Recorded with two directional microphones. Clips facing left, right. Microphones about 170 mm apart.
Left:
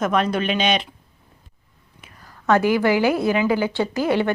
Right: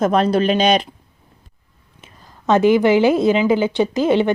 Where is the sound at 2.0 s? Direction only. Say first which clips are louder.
Right 1 dB; 20° right (ahead or behind).